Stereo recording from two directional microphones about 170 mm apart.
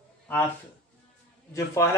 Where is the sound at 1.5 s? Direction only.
15° left (ahead or behind).